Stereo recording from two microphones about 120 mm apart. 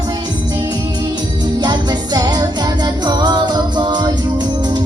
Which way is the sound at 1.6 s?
35° right (ahead or behind).